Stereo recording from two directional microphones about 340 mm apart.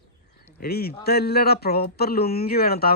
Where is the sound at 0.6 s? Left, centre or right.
Left.